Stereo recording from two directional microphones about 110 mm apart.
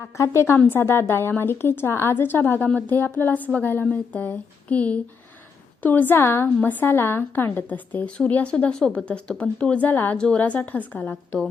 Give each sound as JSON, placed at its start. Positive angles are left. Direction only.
{"t": 0.2, "sound": "a woman's voice", "side_deg": 25}